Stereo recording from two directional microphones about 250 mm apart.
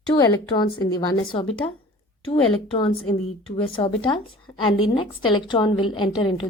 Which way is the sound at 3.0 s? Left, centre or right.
Left.